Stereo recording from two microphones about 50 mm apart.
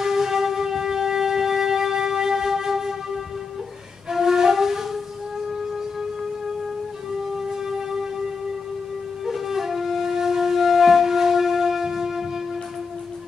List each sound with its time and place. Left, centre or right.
0.0 s music: centre
4.1 s flute: centre
7.3 s a sound: centre
9.2 s flute: centre